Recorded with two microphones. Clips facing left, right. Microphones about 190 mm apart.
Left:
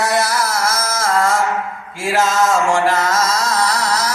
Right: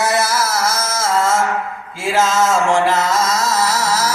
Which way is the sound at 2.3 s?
Centre (ahead or behind).